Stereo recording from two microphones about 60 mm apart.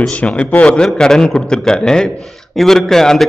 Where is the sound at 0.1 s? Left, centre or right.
Centre.